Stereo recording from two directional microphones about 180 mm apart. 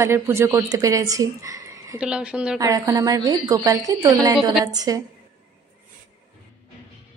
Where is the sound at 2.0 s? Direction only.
5° right (ahead or behind).